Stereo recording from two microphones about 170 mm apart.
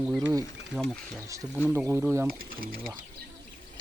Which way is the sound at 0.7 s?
5° left (ahead or behind).